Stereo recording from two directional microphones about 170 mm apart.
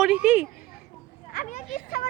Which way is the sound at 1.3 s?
45° left (ahead or behind).